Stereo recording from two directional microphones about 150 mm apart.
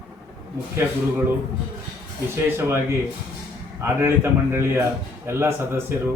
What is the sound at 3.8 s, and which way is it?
A man's voice, 15° right (ahead or behind).